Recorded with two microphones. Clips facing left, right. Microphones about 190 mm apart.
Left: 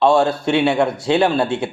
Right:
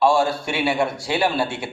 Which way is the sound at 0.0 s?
20° left (ahead or behind).